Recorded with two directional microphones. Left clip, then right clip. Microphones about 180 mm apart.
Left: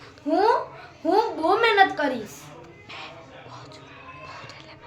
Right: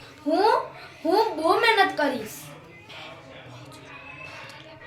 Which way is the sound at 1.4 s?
5° right (ahead or behind).